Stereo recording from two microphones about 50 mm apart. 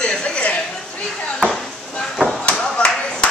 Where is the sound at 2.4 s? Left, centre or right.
Left.